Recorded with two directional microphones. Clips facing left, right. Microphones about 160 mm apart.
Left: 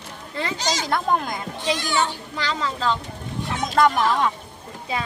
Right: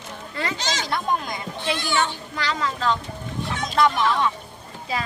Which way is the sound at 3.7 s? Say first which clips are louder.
Left 2 dB; 45° left (ahead or behind).